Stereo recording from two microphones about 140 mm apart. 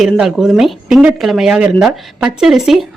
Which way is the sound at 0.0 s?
5° right (ahead or behind).